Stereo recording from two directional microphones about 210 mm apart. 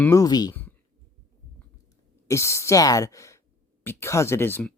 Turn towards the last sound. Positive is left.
turn(degrees=10)  # may be behind; listen again after turning